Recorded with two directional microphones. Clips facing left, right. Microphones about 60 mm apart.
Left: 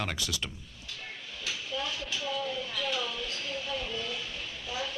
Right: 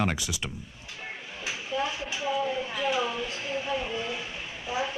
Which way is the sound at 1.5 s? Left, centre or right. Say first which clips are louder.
Right 5 dB; right.